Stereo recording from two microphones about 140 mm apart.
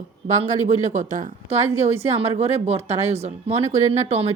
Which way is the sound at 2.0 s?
50° right (ahead or behind).